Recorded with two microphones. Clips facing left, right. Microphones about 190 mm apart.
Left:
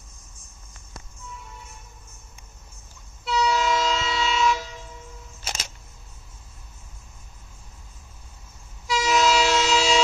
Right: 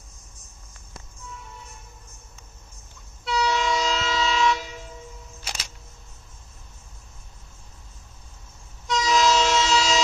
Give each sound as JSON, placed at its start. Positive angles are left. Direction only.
{"t": 3.3, "sound": "train", "side_deg": 0}
{"t": 8.8, "sound": "train", "side_deg": 5}